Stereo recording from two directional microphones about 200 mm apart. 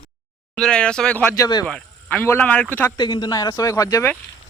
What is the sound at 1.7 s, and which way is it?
Speech, 5° left (ahead or behind).